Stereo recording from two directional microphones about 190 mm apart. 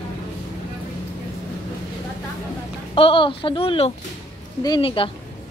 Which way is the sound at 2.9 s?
30° left (ahead or behind).